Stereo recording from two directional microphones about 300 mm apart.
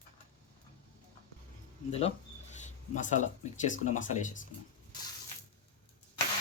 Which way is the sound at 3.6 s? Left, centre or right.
Left.